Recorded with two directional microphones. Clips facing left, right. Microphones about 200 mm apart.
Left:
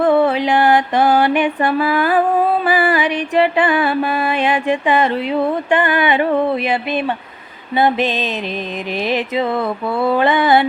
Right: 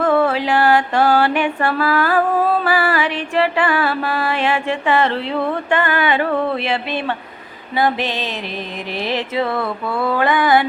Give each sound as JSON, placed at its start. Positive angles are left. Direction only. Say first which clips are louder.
{"t": 0.0, "sound": "music", "louder": "left 2 dB", "side_deg": 20}